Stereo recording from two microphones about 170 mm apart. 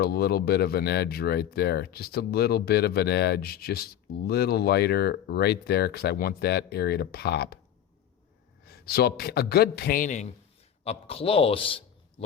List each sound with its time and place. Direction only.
0.0 s speech: 70° left (ahead or behind)
8.6 s a man's voice: 65° left (ahead or behind); by 10.3 s 45° left (ahead or behind)
10.8 s a man's voice: 35° left (ahead or behind)